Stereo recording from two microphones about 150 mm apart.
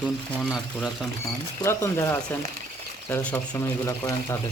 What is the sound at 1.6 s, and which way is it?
Speech, 20° left (ahead or behind).